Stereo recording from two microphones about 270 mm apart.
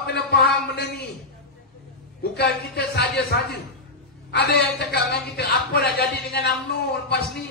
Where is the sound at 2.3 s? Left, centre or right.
Left.